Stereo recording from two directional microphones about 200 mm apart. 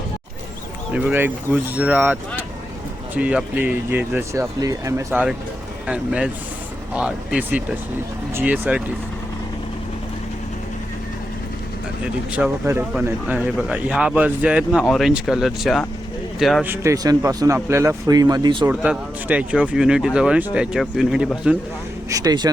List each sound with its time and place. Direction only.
0.9 s speech: 10° right (ahead or behind)
3.2 s speech: 5° right (ahead or behind)
5.9 s speech: 5° right (ahead or behind)
12.0 s speech: 5° right (ahead or behind)
16.6 s speech: 15° right (ahead or behind)
18.7 s speech: 5° right (ahead or behind)
22.1 s speech: 20° right (ahead or behind)